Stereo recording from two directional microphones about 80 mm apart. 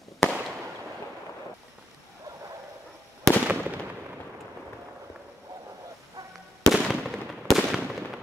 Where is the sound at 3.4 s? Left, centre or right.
Right.